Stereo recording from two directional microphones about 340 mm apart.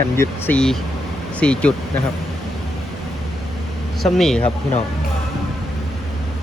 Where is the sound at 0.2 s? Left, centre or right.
Centre.